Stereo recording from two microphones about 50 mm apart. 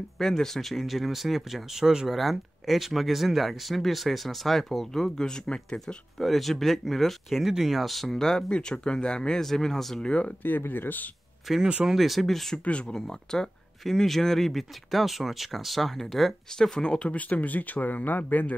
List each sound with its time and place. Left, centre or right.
0.2 s speech: centre
2.1 s speech: centre
6.1 s speech: centre
10.0 s speech: left
10.7 s speech: left
11.6 s speech: centre
11.9 s speech: centre
12.6 s speech: centre
16.5 s speech: centre
17.3 s speech: left